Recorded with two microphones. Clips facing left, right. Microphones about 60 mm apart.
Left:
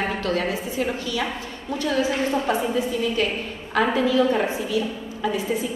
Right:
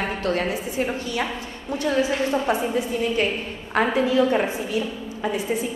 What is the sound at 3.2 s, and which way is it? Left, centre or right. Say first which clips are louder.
A woman's voice: right 1 dB; right.